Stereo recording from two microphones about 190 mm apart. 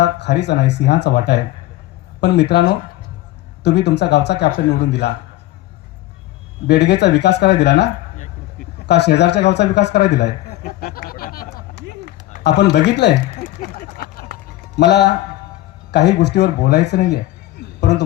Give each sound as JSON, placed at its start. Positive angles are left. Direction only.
{"t": 0.0, "sound": "a man's voice", "side_deg": 65}
{"t": 6.7, "sound": "a man's voice", "side_deg": 60}
{"t": 8.9, "sound": "a man's voice", "side_deg": 65}
{"t": 12.4, "sound": "speech", "side_deg": 60}
{"t": 14.8, "sound": "a man's voice", "side_deg": 65}
{"t": 17.7, "sound": "a sound", "side_deg": 65}